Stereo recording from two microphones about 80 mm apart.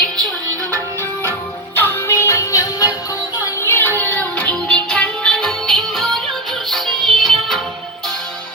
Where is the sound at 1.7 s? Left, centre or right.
Left.